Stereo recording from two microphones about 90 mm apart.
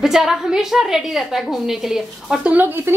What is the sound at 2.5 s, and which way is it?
Speech, 25° right (ahead or behind).